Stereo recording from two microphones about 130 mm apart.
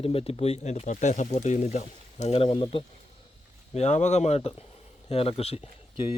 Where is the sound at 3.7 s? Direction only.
65° left (ahead or behind).